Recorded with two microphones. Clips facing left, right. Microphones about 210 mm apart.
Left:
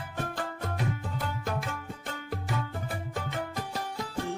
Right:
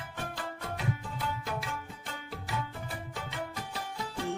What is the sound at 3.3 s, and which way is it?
Music, 45° left (ahead or behind).